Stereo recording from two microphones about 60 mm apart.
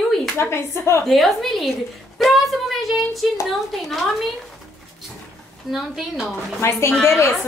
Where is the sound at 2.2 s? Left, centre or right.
Centre.